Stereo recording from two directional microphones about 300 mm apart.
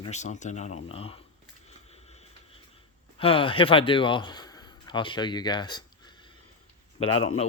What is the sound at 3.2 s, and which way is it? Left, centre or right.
Speech, centre.